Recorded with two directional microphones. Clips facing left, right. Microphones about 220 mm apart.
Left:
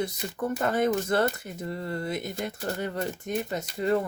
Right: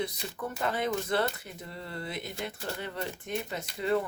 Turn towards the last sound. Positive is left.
turn(degrees=45)  # may be behind; listen again after turning